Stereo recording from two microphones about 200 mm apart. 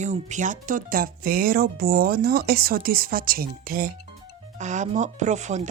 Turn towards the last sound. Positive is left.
turn(degrees=-35)  # may be behind; listen again after turning